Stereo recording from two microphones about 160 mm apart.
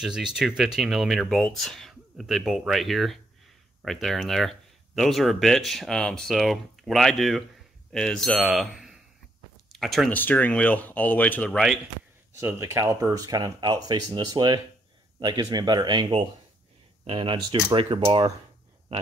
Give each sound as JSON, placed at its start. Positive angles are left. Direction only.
{"t": 0.0, "sound": "speech", "side_deg": -5}
{"t": 12.4, "sound": "speech", "side_deg": -15}